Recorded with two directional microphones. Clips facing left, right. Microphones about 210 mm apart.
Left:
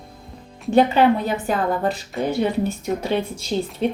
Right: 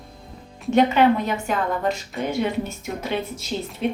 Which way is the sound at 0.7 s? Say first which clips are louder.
Left 1 dB; 35° left (ahead or behind).